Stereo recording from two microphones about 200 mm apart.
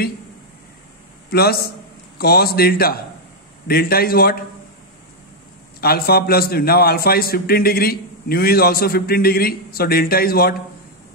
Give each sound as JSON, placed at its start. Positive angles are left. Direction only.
{"t": 1.3, "sound": "a man's voice", "side_deg": 50}
{"t": 5.8, "sound": "a man's voice", "side_deg": 50}